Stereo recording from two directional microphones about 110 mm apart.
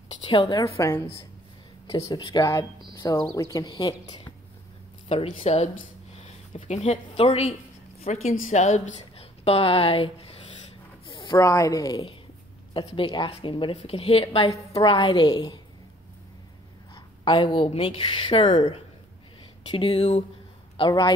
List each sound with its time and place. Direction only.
0.3 s a woman's voice: 40° left (ahead or behind)
0.7 s a woman's voice: 25° left (ahead or behind)
2.0 s a woman's voice: 40° left (ahead or behind)
5.0 s speech: 65° left (ahead or behind)
6.2 s speech: 80° left
8.0 s a woman's voice: 90° left; by 10.3 s 55° left (ahead or behind)
11.1 s a sound: 45° left (ahead or behind)
11.3 s a woman's voice: 30° left (ahead or behind)
12.7 s a woman's voice: 45° left (ahead or behind)
16.9 s a sound: 45° left (ahead or behind)
17.6 s speech: 55° left (ahead or behind)
20.8 s speech: 55° left (ahead or behind)